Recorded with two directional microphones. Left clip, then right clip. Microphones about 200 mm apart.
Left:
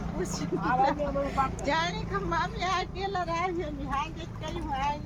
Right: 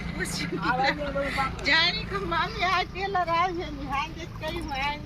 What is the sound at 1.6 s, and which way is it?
Speech, 35° left (ahead or behind).